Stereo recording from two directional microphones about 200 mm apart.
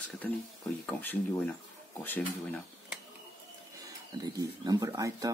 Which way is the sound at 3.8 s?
15° right (ahead or behind).